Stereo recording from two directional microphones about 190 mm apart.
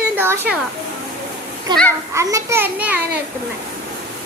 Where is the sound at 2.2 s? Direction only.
15° right (ahead or behind).